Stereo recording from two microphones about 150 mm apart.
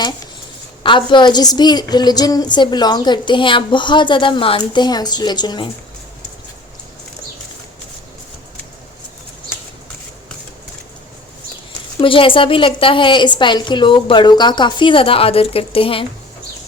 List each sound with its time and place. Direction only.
0.8 s a woman's voice: 35° left (ahead or behind)
11.9 s a woman's voice: 35° left (ahead or behind)